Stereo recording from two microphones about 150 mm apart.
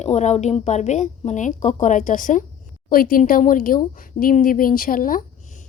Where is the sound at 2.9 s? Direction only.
70° left (ahead or behind).